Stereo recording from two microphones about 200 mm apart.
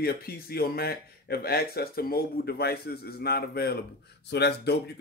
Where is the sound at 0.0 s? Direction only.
50° left (ahead or behind).